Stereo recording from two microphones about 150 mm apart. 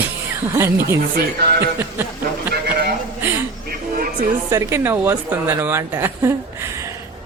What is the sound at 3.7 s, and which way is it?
Music, 65° right (ahead or behind).